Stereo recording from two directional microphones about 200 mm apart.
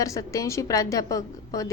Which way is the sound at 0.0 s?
15° left (ahead or behind).